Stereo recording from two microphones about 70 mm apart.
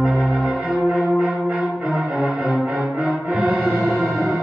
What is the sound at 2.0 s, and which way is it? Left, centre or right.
Music, centre.